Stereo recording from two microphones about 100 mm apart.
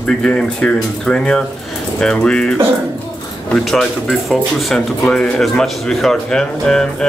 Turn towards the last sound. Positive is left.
turn(degrees=5)  # may be behind; listen again after turning